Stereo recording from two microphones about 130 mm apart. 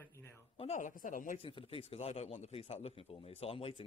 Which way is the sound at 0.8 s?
85° left.